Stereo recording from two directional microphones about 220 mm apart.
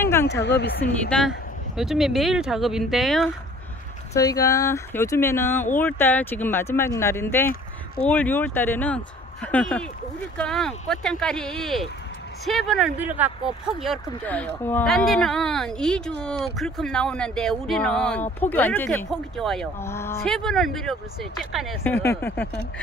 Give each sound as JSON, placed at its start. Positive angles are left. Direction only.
{"t": 0.0, "sound": "a sound", "side_deg": 10}
{"t": 0.3, "sound": "speech", "side_deg": 50}
{"t": 1.8, "sound": "speech", "side_deg": 0}
{"t": 4.1, "sound": "speech", "side_deg": 15}